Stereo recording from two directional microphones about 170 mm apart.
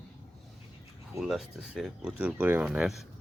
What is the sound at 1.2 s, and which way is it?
Speech, centre (ahead or behind).